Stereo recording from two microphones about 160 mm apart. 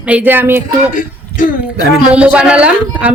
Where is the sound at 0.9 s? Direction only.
55° left (ahead or behind).